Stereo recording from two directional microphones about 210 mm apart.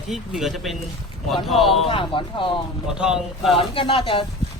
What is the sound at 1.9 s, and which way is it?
Speech, 25° left (ahead or behind).